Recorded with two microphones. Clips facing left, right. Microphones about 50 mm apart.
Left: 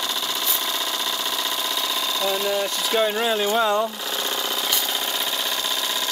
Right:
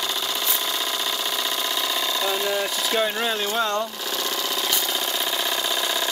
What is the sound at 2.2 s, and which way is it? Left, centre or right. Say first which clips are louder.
Speech: left 2 dB; centre.